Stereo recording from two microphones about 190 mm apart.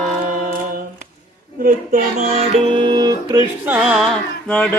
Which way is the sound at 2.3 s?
25° right (ahead or behind).